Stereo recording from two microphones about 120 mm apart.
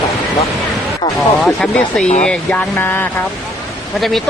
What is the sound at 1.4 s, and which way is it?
Speech, 5° left (ahead or behind).